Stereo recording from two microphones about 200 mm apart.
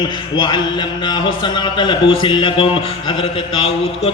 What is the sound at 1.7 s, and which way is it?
A man's voice, 25° left (ahead or behind).